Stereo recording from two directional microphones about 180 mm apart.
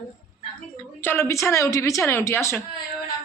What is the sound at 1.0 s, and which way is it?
A woman's voice, 15° left (ahead or behind).